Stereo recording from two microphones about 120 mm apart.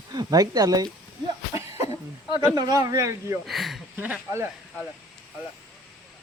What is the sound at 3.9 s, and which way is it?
Speech, 15° right (ahead or behind).